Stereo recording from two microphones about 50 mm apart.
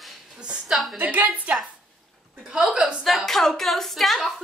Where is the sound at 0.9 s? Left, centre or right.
Right.